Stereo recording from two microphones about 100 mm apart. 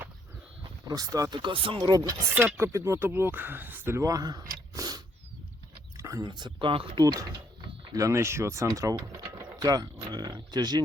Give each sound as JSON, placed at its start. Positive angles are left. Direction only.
{"t": 0.9, "sound": "speech", "side_deg": -35}
{"t": 1.4, "sound": "speech", "side_deg": -55}
{"t": 1.8, "sound": "speech", "side_deg": -35}
{"t": 2.3, "sound": "speech", "side_deg": -25}
{"t": 4.0, "sound": "a sound", "side_deg": -35}
{"t": 6.2, "sound": "speech", "side_deg": -50}
{"t": 7.0, "sound": "speech", "side_deg": -35}
{"t": 9.4, "sound": "a sound", "side_deg": -45}